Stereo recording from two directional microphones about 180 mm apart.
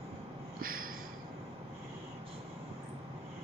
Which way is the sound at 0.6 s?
50° right (ahead or behind).